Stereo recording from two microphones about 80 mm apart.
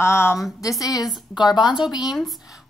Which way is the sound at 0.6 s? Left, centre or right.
Left.